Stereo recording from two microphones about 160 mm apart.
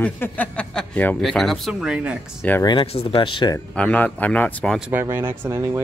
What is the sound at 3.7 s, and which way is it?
Speech, 10° left (ahead or behind).